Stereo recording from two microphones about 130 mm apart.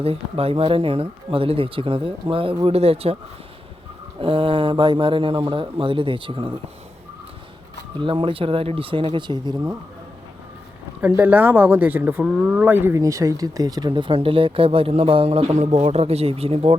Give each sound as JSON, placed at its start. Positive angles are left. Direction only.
{"t": 0.0, "sound": "speech", "side_deg": -50}
{"t": 4.2, "sound": "speech", "side_deg": -45}
{"t": 8.0, "sound": "speech", "side_deg": -40}
{"t": 11.2, "sound": "speech", "side_deg": -15}